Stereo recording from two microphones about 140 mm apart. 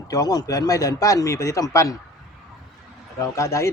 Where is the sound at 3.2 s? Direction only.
20° left (ahead or behind).